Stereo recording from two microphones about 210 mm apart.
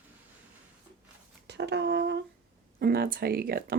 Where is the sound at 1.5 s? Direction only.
55° right (ahead or behind).